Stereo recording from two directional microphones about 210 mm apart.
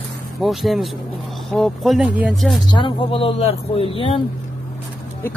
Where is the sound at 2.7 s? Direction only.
25° left (ahead or behind).